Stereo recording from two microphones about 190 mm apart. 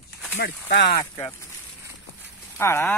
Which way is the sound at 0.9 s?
15° left (ahead or behind).